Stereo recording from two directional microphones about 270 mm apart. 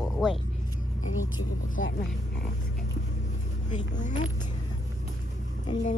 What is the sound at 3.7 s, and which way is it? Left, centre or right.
Speech, left.